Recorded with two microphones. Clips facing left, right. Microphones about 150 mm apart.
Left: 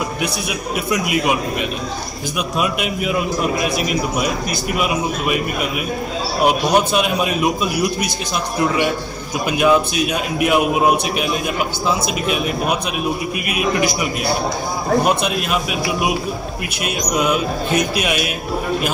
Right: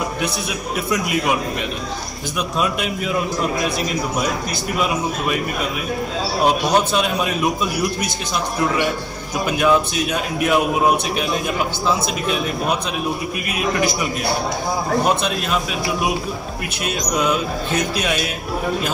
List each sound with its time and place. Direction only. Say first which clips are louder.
0.9 s a man's voice: left 2 dB; 15° left (ahead or behind)
4.7 s a man's voice: even; 15° left (ahead or behind)
6.4 s a man's voice: left 2 dB; 15° left (ahead or behind)
9.5 s a man's voice: left 2 dB; 15° left (ahead or behind)
15.0 s a man's voice: left 1 dB; 15° left (ahead or behind)
17.1 s a man's voice: left 2 dB; 15° left (ahead or behind)